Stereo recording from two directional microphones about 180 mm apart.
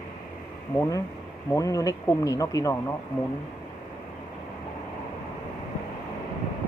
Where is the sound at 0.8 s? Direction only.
15° left (ahead or behind).